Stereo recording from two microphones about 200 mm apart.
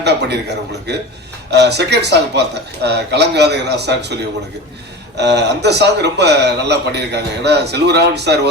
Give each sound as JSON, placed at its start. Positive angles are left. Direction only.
{"t": 0.0, "sound": "a man's voice", "side_deg": -55}
{"t": 1.5, "sound": "a man's voice", "side_deg": -55}